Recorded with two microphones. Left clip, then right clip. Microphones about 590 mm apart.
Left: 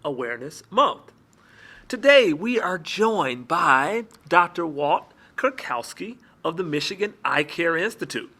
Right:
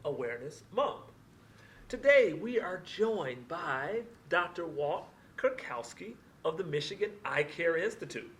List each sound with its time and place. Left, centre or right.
0.0 s speech: left